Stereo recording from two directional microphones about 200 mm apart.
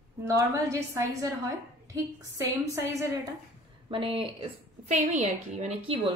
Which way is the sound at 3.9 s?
25° right (ahead or behind).